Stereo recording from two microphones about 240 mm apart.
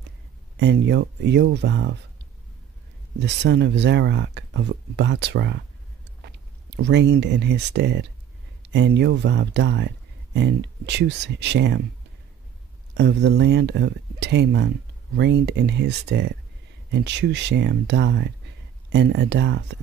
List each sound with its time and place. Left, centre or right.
0.6 s speech: right
3.2 s speech: right
6.8 s speech: right
12.9 s speech: right